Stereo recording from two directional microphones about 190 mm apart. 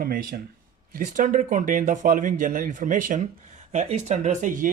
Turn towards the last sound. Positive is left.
turn(degrees=-45)  # may be behind; listen again after turning